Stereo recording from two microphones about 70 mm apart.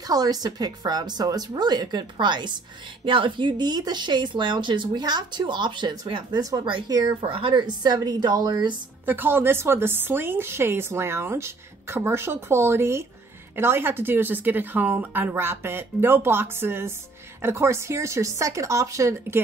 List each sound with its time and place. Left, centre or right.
0.0 s a woman's voice: right
3.5 s speech: right
9.0 s speech: right
15.3 s speech: right